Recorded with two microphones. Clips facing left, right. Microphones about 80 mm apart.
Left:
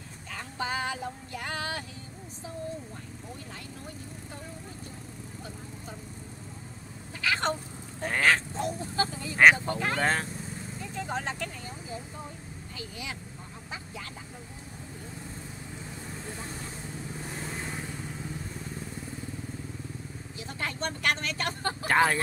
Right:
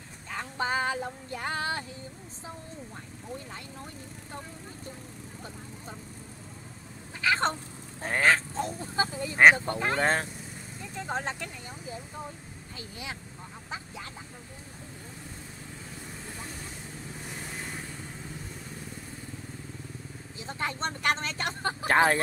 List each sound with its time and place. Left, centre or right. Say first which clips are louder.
0.3 s a sound: right 3 dB; right
7.2 s speech: right 2 dB; right
20.3 s speech: right 2 dB; right